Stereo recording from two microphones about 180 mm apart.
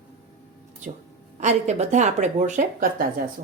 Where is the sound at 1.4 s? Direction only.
40° right (ahead or behind).